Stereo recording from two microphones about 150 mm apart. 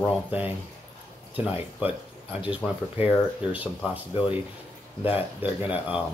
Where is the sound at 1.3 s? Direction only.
10° right (ahead or behind).